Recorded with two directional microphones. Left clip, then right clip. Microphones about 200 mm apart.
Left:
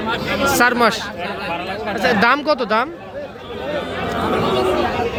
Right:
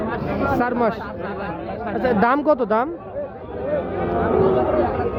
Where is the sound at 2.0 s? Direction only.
10° right (ahead or behind).